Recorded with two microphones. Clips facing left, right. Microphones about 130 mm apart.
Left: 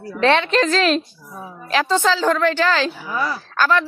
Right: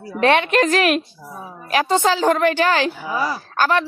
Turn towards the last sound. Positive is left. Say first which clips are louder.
# even
turn(degrees=-45)  # may be behind; listen again after turning